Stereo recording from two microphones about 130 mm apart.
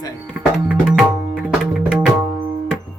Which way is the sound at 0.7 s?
5° right (ahead or behind).